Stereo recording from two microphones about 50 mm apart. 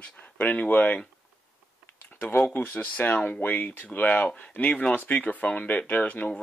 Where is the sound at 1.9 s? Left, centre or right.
Left.